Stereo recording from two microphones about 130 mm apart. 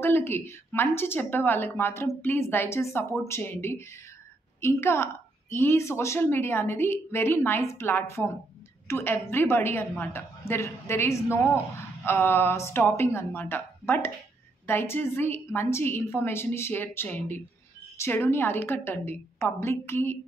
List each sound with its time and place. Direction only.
0.0 s a woman's voice: 15° left (ahead or behind)